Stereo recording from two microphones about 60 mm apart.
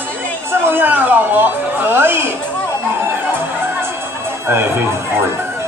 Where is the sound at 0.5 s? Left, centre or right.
Right.